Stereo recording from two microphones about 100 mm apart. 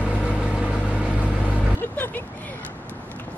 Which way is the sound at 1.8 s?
20° left (ahead or behind).